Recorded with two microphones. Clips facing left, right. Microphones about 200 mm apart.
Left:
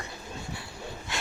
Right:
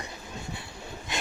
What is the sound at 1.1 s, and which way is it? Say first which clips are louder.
Wood: right 3 dB; 20° right (ahead or behind).